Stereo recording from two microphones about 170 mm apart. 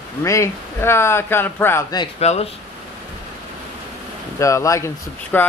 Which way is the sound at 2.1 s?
40° left (ahead or behind).